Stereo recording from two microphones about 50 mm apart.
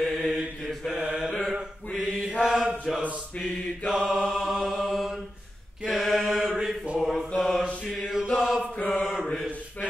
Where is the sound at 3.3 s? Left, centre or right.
Centre.